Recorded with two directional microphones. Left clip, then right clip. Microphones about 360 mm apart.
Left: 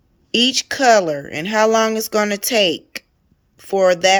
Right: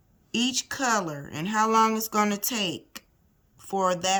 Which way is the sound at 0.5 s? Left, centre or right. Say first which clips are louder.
Left 14 dB; centre.